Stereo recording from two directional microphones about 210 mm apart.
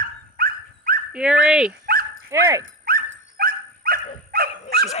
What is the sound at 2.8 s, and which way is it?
Dog, 45° right (ahead or behind).